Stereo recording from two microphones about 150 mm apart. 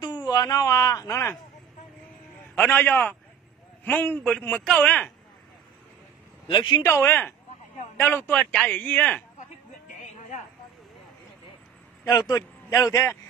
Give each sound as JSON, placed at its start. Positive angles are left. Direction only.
{"t": 0.0, "sound": "speech", "side_deg": 25}
{"t": 2.5, "sound": "speech", "side_deg": 10}
{"t": 6.4, "sound": "speech", "side_deg": 35}
{"t": 6.8, "sound": "speech", "side_deg": 15}
{"t": 12.1, "sound": "a man's voice", "side_deg": 25}